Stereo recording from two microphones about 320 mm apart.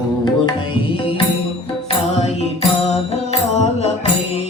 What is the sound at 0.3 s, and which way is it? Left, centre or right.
Music, centre.